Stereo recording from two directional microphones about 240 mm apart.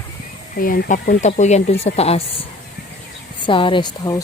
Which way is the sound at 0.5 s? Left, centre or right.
Left.